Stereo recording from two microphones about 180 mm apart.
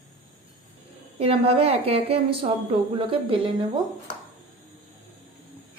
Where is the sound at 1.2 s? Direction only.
35° right (ahead or behind).